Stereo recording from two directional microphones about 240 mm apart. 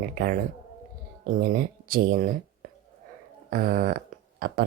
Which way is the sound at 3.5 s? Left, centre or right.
Right.